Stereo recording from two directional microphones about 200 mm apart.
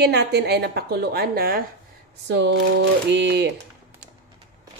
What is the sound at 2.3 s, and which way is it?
Speech, 60° right (ahead or behind).